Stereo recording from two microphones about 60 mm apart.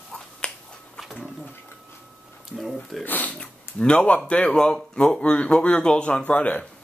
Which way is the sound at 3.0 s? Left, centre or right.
Left.